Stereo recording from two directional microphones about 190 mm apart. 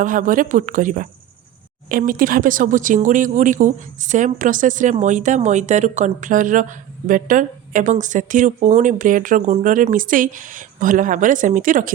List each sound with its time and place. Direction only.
0.0 s a woman's voice: 45° right (ahead or behind)